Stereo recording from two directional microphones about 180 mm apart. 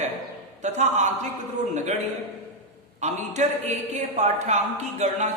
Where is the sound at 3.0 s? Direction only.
40° right (ahead or behind).